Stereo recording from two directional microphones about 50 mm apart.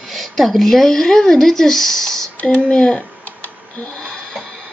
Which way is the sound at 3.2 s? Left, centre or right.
Left.